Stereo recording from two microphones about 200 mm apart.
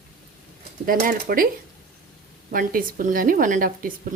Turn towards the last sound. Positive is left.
turn(degrees=-45)  # may be behind; listen again after turning